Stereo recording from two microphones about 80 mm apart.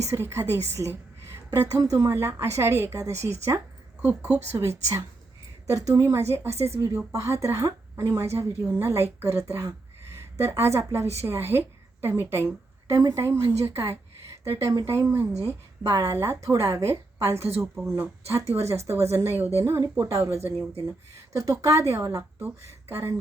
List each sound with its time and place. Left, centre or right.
0.1 s a woman's voice: right
1.5 s a woman's voice: right
2.1 s a woman's voice: right
4.0 s a woman's voice: centre
4.5 s a woman's voice: right
12.9 s a woman's voice: right
13.1 s a woman's voice: right
13.9 s a sound: right
14.8 s a woman's voice: right
15.4 s a woman's voice: right